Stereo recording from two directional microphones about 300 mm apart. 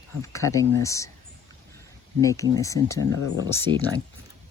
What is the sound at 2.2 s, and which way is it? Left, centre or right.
Speech, centre.